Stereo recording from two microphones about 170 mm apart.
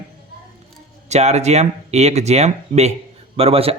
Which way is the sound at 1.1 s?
40° right (ahead or behind).